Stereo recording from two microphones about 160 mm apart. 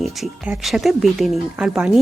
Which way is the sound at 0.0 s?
5° right (ahead or behind).